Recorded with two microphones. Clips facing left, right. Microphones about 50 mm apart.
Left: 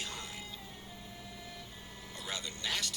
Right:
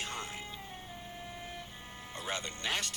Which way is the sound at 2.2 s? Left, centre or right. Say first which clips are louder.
Right 3 dB; right.